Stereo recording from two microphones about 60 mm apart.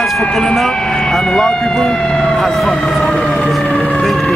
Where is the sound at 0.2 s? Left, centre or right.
Centre.